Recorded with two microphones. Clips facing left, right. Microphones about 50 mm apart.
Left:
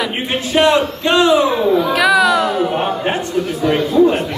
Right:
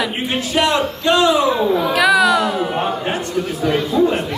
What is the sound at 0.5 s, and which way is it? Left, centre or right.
A man's voice, left.